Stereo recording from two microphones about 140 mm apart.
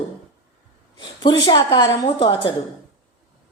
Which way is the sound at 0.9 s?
30° left (ahead or behind).